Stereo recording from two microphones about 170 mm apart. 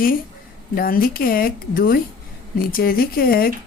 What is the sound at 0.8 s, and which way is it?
Speech, 60° left (ahead or behind).